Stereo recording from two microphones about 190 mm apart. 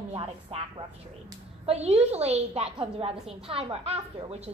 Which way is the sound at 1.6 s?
35° right (ahead or behind).